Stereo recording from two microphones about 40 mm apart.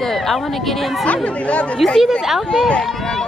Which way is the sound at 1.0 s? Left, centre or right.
Left.